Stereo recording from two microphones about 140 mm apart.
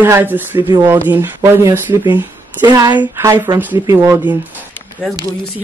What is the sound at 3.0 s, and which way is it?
Speech, 20° right (ahead or behind).